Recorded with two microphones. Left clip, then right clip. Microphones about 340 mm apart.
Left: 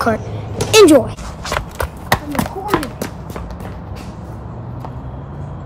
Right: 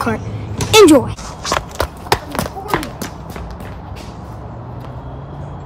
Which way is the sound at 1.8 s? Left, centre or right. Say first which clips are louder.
Right 2 dB; right.